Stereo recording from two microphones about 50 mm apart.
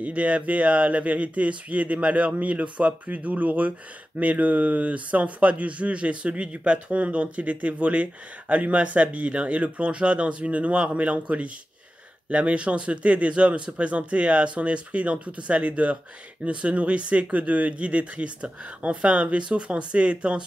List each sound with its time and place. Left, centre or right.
0.0 s a man's voice: right